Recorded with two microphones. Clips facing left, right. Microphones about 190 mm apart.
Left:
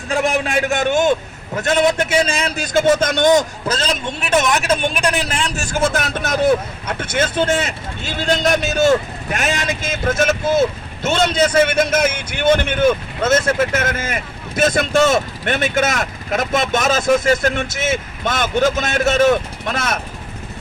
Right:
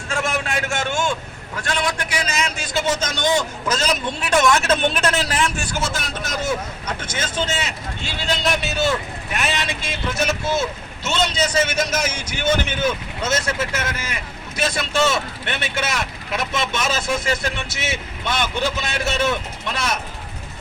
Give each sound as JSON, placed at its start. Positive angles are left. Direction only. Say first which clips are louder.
{"t": 0.1, "sound": "a sound", "louder": "left 6 dB", "side_deg": 15}
{"t": 1.8, "sound": "a man's voice", "louder": "left 11 dB", "side_deg": 25}
{"t": 2.6, "sound": "speech", "louder": "left 11 dB", "side_deg": 50}
{"t": 3.7, "sound": "a man's voice", "louder": "left 1 dB", "side_deg": 30}
{"t": 5.5, "sound": "speech", "louder": "left 7 dB", "side_deg": 50}